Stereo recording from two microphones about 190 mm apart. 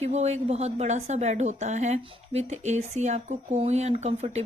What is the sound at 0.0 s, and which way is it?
A woman's voice, 35° right (ahead or behind).